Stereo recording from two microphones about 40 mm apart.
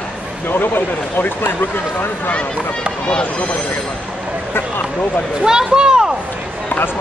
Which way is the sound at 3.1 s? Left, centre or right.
Left.